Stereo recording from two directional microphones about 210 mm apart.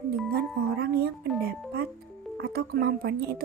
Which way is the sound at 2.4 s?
50° right (ahead or behind).